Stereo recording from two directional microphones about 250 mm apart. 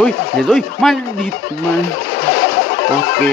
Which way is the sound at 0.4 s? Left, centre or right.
Centre.